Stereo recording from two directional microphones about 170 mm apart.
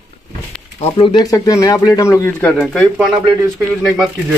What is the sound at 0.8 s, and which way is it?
Speech, 30° left (ahead or behind).